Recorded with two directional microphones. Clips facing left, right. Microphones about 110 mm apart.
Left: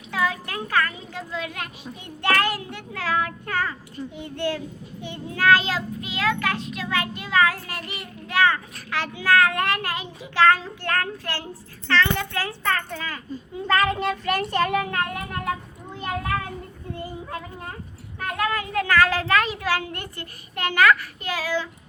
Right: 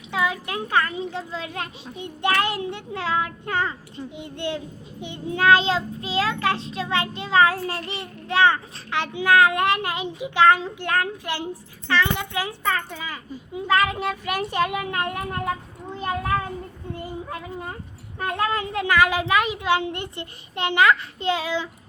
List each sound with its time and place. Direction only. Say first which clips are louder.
0.1 s a child's voice: right 1 dB; 20° right (ahead or behind)
18.2 s a child's voice: right 1 dB; 25° right (ahead or behind)